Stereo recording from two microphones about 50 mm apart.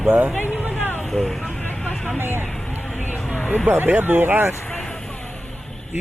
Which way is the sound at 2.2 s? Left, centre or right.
Right.